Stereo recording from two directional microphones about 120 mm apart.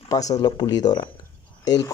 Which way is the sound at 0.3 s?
35° left (ahead or behind).